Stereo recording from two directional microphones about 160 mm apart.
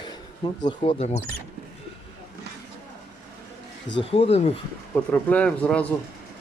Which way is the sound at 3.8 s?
35° left (ahead or behind).